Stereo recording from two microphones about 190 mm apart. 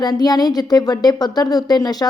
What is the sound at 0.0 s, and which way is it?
Speech, 20° left (ahead or behind).